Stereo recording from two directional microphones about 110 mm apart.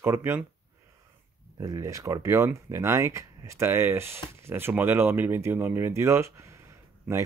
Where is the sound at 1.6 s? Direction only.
30° right (ahead or behind).